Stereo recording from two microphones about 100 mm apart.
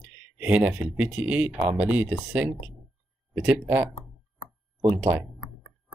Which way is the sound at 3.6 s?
20° right (ahead or behind).